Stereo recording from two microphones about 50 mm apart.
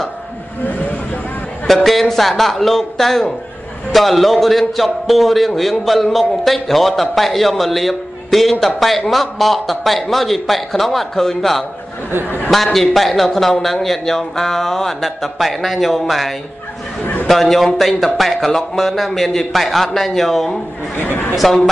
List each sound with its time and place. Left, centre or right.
1.7 s speech: centre
12.7 s speech: centre
20.9 s a woman's voice: left